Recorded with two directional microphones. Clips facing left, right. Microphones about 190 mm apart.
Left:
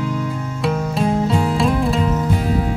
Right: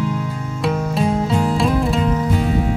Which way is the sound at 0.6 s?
Centre (ahead or behind).